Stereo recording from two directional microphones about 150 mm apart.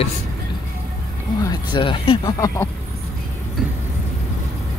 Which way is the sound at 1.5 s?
30° left (ahead or behind).